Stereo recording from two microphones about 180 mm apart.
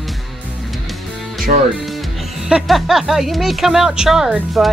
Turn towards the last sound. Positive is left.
turn(degrees=-5)  # may be behind; listen again after turning